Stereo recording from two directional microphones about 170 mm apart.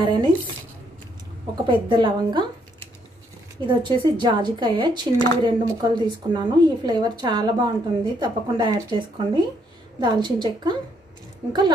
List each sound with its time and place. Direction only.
0.0 s speech: 25° right (ahead or behind)
1.7 s speech: 30° right (ahead or behind)
3.6 s speech: 25° right (ahead or behind)